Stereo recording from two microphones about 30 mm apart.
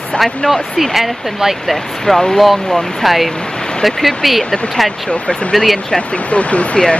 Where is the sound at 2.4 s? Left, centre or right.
Centre.